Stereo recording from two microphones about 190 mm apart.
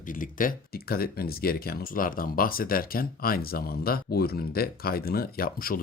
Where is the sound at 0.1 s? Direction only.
45° left (ahead or behind).